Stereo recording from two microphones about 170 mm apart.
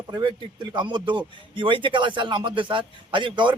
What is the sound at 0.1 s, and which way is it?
Speech, 25° right (ahead or behind).